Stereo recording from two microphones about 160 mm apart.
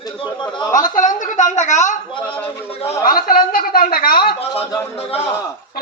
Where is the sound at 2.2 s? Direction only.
10° left (ahead or behind).